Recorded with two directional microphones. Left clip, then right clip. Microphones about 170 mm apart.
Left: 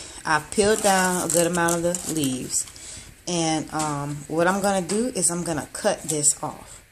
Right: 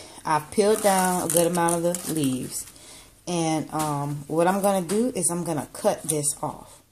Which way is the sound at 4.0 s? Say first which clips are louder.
Even; 5° right (ahead or behind).